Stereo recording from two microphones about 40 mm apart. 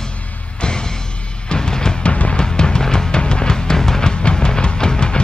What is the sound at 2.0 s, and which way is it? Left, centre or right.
Music, left.